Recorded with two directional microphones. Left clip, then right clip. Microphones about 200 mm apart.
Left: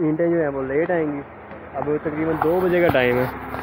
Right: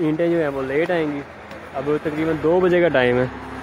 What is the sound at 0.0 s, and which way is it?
A man's voice, 15° right (ahead or behind).